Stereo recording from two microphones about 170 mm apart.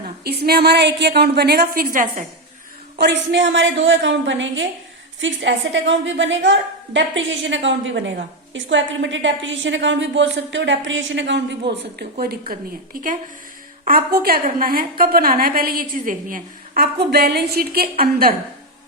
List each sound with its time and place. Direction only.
0.3 s a woman's voice: 65° right (ahead or behind)
1.6 s a woman's voice: 55° right (ahead or behind)
3.0 s a woman's voice: 90° right; by 18.3 s 60° right (ahead or behind)